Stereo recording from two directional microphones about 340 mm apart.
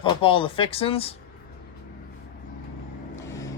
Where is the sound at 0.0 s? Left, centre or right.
Centre.